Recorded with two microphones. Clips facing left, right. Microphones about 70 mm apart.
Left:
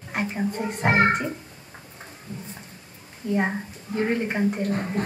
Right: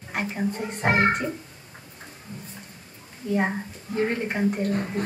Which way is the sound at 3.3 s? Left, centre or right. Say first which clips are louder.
Even; centre.